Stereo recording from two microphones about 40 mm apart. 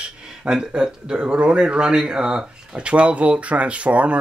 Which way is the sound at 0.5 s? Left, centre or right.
Centre.